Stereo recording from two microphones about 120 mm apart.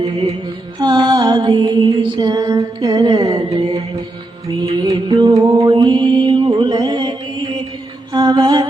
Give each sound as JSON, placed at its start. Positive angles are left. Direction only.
{"t": 0.0, "sound": "mantra", "side_deg": -30}
{"t": 0.8, "sound": "music", "side_deg": -35}
{"t": 4.8, "sound": "music", "side_deg": -40}
{"t": 5.6, "sound": "mantra", "side_deg": -40}
{"t": 8.1, "sound": "music", "side_deg": -35}